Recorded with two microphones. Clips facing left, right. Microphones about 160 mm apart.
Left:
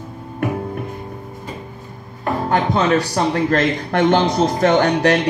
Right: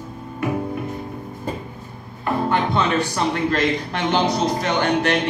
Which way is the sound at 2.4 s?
40° left (ahead or behind).